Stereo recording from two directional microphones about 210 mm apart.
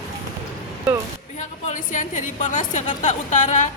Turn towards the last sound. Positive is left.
turn(degrees=35)  # may be behind; listen again after turning